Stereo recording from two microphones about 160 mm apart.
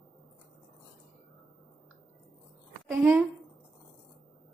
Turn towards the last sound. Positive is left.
turn(degrees=-5)  # may be behind; listen again after turning